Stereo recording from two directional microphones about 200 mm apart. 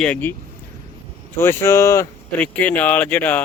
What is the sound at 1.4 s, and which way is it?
Speech, 10° left (ahead or behind).